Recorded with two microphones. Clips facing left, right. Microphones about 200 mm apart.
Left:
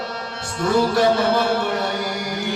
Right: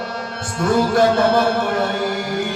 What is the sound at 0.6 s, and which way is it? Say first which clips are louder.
Music: right 2 dB; 50° right (ahead or behind).